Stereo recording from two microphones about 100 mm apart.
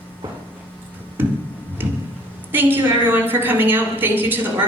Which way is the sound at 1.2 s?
20° right (ahead or behind).